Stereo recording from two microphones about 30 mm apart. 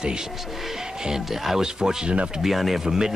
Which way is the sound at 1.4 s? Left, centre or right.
Centre.